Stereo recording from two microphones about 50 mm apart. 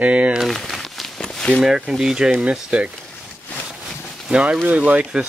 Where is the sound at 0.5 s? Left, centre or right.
Centre.